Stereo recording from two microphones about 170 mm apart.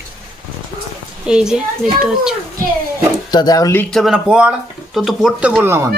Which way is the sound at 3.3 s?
25° left (ahead or behind).